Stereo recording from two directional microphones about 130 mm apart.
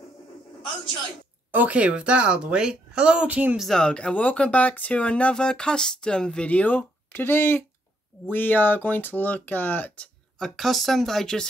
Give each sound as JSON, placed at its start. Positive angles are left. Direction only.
{"t": 1.5, "sound": "speech", "side_deg": -10}
{"t": 3.6, "sound": "speech", "side_deg": 5}
{"t": 10.4, "sound": "speech", "side_deg": 0}